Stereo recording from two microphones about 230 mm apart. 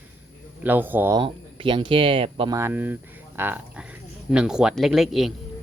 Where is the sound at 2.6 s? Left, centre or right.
Centre.